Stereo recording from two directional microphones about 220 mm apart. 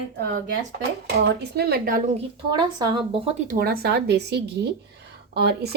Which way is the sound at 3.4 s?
45° right (ahead or behind).